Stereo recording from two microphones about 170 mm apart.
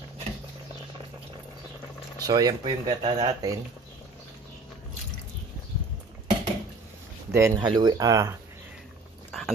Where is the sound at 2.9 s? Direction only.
35° right (ahead or behind).